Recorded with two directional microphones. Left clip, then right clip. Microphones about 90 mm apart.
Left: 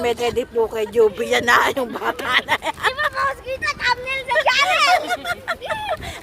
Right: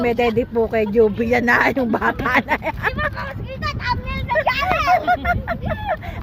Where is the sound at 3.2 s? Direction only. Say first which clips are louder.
Left 6 dB; 25° left (ahead or behind).